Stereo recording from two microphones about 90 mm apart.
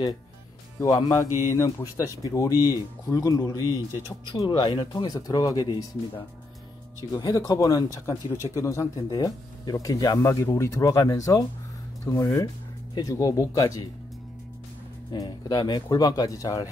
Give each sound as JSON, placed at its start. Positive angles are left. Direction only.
{"t": 0.7, "sound": "speech", "side_deg": 35}
{"t": 4.4, "sound": "speech", "side_deg": 55}
{"t": 15.1, "sound": "speech", "side_deg": 50}